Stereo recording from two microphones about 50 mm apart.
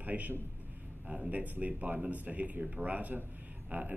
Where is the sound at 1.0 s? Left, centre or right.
Centre.